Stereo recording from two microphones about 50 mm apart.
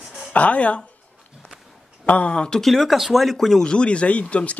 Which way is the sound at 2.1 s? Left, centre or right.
Left.